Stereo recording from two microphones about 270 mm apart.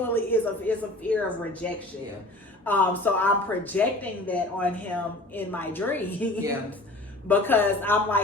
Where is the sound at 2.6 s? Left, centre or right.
Centre.